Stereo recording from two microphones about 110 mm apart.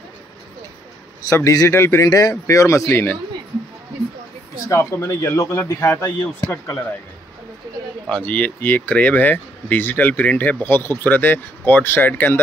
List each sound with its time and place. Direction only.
1.3 s speech: 30° left (ahead or behind)
4.6 s speech: 25° left (ahead or behind)
8.1 s speech: 10° left (ahead or behind)